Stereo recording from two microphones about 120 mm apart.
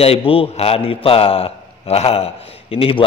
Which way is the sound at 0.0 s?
55° left (ahead or behind).